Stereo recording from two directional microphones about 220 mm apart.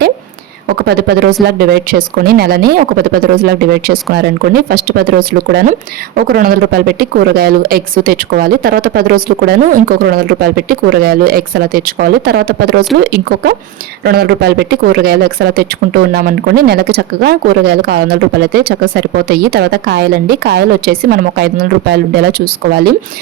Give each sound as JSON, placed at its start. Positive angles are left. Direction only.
{"t": 0.9, "sound": "speech", "side_deg": -45}